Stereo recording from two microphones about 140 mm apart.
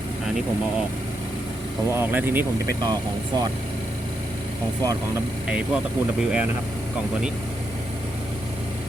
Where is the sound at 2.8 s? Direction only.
30° right (ahead or behind).